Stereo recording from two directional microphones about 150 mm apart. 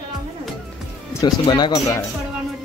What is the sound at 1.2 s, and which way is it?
Speech, 30° left (ahead or behind).